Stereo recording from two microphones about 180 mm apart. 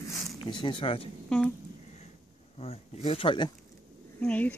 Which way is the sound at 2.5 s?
35° left (ahead or behind).